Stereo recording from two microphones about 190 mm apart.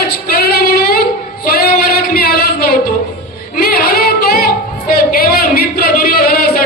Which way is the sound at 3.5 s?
50° left (ahead or behind).